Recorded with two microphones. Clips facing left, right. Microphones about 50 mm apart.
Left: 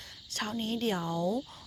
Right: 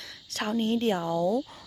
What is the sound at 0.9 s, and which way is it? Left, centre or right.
Speech, centre.